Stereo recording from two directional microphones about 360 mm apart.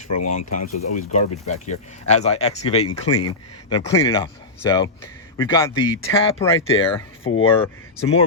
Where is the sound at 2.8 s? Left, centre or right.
Left.